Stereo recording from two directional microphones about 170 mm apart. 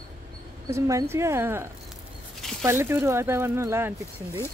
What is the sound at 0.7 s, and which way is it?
Speech, 15° right (ahead or behind).